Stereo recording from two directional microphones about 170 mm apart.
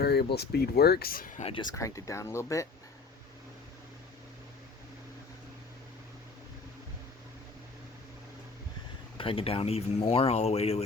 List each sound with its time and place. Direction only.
0.0 s speech: 70° left (ahead or behind)
1.4 s speech: 35° left (ahead or behind)
1.7 s speech: 20° left (ahead or behind)
9.1 s speech: 30° left (ahead or behind)